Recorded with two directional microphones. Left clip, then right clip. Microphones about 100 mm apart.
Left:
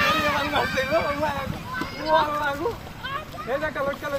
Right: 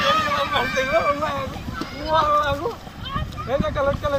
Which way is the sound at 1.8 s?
25° right (ahead or behind).